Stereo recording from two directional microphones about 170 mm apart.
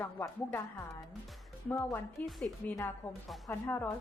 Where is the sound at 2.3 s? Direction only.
Centre (ahead or behind).